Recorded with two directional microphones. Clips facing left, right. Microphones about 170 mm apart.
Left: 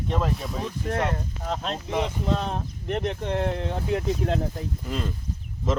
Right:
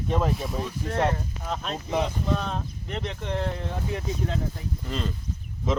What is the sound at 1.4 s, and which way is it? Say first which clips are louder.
Speech: left 3 dB; 30° left (ahead or behind).